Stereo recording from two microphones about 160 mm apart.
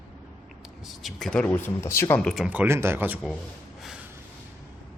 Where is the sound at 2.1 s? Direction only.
Centre (ahead or behind).